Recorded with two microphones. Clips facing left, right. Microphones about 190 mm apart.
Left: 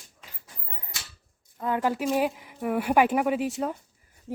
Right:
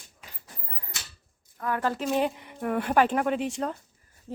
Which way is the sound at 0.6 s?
20° left (ahead or behind).